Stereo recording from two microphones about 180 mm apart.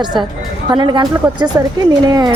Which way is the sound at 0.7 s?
25° right (ahead or behind).